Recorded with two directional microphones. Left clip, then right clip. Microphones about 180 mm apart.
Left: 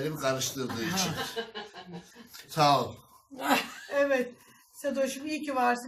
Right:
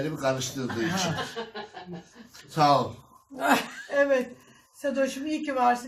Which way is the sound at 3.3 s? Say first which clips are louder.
Right 4 dB; 65° right (ahead or behind).